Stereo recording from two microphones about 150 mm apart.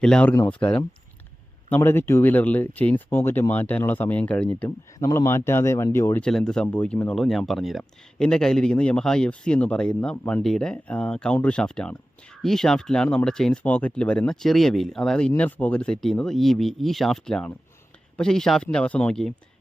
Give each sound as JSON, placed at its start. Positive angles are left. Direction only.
{"t": 0.0, "sound": "speech", "side_deg": 5}
{"t": 1.7, "sound": "speech", "side_deg": 15}
{"t": 4.9, "sound": "speech", "side_deg": 20}
{"t": 6.2, "sound": "speech", "side_deg": 5}